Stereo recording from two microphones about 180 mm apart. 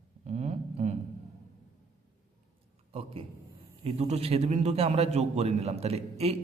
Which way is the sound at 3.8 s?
35° right (ahead or behind).